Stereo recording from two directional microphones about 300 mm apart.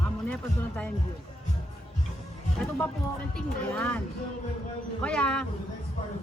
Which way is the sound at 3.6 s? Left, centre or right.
Centre.